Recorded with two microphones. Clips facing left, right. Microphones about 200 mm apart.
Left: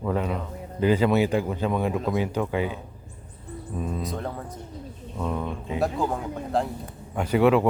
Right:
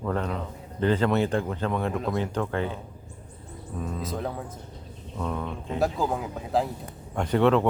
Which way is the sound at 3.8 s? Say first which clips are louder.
Left 1 dB; 10° left (ahead or behind).